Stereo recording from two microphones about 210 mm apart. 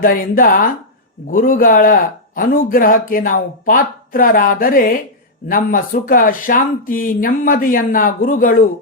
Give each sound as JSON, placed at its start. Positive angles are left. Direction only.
{"t": 0.0, "sound": "speech", "side_deg": 40}